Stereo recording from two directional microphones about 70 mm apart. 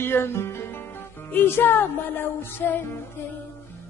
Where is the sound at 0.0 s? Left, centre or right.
Left.